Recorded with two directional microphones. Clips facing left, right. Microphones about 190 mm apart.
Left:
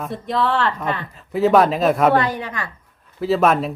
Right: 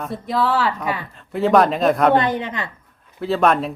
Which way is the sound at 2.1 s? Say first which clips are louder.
Right 1 dB; 20° right (ahead or behind).